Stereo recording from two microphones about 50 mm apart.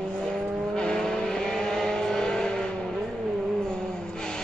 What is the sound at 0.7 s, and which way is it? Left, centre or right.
Vehicle, centre.